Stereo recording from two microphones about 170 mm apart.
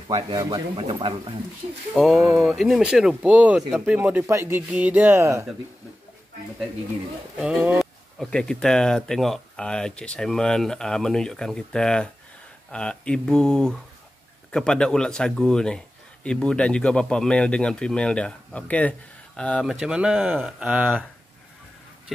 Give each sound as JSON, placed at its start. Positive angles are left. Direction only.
{"t": 0.1, "sound": "speech", "side_deg": -20}
{"t": 2.0, "sound": "speech", "side_deg": 0}
{"t": 7.3, "sound": "speech", "side_deg": -10}
{"t": 8.2, "sound": "speech", "side_deg": 5}